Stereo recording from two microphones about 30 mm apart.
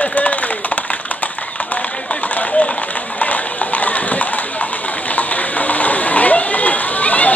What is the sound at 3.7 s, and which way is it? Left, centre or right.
Clip-clop, left.